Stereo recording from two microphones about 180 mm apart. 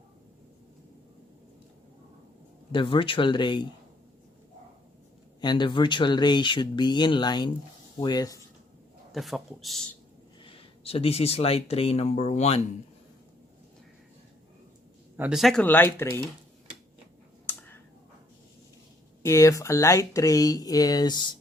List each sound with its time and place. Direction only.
2.7 s speech: 30° left (ahead or behind)
5.4 s speech: 25° left (ahead or behind)
9.1 s speech: centre (ahead or behind)
10.4 s speech: 30° left (ahead or behind)
15.1 s speech: 5° right (ahead or behind); by 16.2 s 15° left (ahead or behind)
17.5 s a sound: 10° left (ahead or behind)
19.2 s speech: 15° left (ahead or behind)